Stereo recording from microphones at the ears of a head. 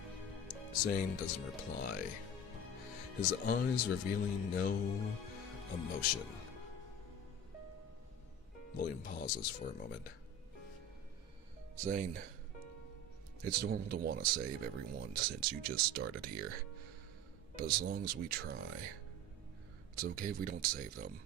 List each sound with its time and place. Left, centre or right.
0.2 s music: left
1.9 s speech: left
8.8 s speech: left
11.8 s speech: right
13.4 s speech: right
20.0 s speech: right